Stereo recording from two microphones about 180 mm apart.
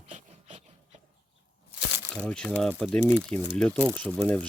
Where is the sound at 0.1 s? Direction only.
35° right (ahead or behind).